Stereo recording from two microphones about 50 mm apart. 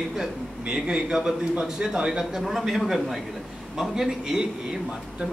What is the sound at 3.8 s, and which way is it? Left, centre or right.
Speech, centre.